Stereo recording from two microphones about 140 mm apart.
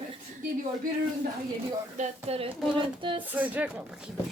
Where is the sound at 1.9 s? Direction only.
50° right (ahead or behind); by 3.2 s 35° right (ahead or behind).